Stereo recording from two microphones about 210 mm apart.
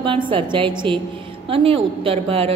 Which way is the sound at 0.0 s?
25° right (ahead or behind).